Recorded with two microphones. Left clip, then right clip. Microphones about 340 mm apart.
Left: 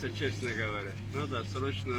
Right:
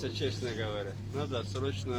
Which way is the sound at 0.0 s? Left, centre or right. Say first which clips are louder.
Even; centre.